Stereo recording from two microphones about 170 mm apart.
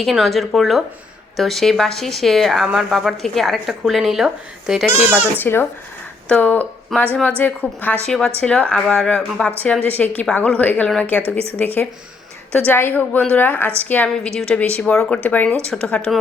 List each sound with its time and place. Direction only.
0.0 s speech: centre (ahead or behind)
5.4 s a woman's voice: 10° left (ahead or behind)
11.2 s speech: 35° right (ahead or behind)
11.5 s a woman's voice: 10° left (ahead or behind)